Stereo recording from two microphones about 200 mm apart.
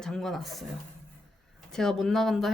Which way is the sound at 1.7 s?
Centre (ahead or behind).